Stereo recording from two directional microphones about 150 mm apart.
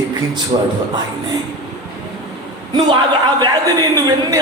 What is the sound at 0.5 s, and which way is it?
Speech, 40° right (ahead or behind).